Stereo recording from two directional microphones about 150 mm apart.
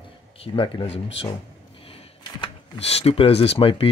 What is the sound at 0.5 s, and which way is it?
Speech, 35° left (ahead or behind).